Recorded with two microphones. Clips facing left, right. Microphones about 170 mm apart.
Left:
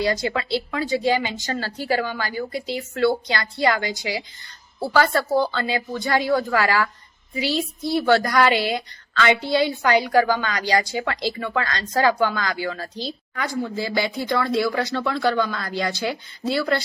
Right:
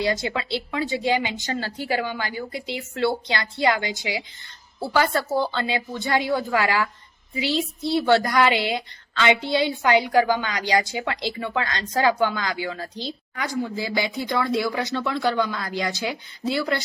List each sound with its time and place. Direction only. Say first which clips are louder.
0.0 s a woman's voice: left 2 dB; 20° right (ahead or behind)
5.4 s a woman's voice: left 2 dB; 20° right (ahead or behind)